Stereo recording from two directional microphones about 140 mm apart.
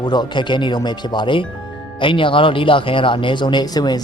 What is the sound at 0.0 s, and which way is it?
Speech, 30° left (ahead or behind).